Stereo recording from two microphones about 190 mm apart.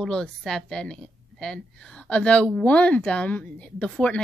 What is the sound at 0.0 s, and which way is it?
A woman's voice, 5° left (ahead or behind).